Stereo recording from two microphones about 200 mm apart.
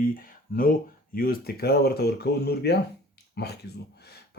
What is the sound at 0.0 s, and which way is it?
Speech, 45° left (ahead or behind).